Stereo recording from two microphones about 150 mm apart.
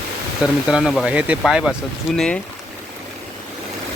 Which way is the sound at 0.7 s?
Centre (ahead or behind).